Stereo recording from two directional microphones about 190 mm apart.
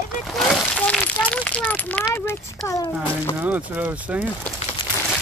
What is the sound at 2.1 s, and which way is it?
Speech, 15° left (ahead or behind).